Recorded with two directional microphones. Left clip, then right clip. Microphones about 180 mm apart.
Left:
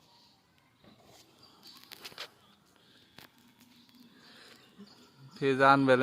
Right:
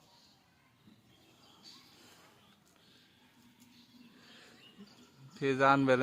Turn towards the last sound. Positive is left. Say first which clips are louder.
# left 4 dB
turn(degrees=0)  # may be behind; listen again after turning